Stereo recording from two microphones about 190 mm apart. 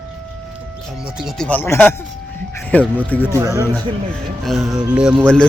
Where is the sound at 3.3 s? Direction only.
15° right (ahead or behind).